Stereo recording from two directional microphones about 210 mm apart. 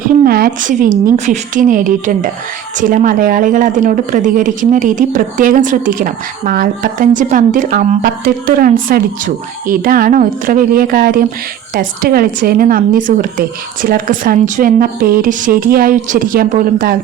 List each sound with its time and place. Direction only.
0.3 s a woman's voice: 45° right (ahead or behind)